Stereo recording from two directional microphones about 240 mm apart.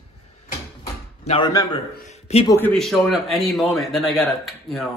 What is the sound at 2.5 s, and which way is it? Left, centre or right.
A man's voice, centre.